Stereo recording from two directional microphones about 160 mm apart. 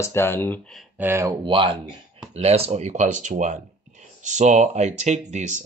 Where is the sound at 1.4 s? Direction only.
30° right (ahead or behind).